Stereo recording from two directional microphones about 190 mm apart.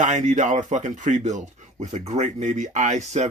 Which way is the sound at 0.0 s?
35° right (ahead or behind).